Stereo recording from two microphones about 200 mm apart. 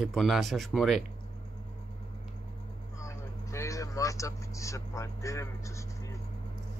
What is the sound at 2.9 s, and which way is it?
Vehicle, 15° left (ahead or behind).